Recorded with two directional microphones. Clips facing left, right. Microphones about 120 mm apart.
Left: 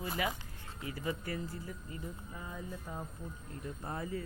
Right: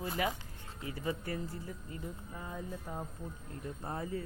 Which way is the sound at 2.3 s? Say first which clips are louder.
Right 2 dB; 50° right (ahead or behind).